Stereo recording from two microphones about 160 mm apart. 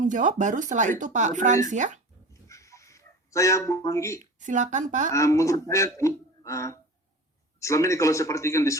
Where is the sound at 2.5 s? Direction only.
20° left (ahead or behind).